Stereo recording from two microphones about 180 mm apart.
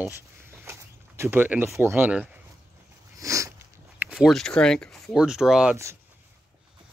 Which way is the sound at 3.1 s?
15° right (ahead or behind).